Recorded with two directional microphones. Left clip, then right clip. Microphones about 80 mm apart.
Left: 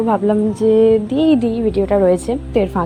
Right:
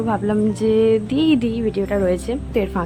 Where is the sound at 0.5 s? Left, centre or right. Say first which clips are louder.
Left 4 dB; centre.